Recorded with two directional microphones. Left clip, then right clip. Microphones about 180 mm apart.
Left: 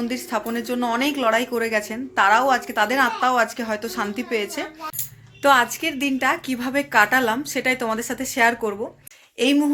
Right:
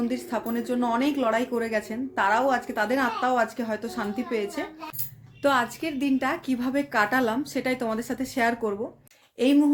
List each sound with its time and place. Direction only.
0.1 s a woman's voice: centre (ahead or behind)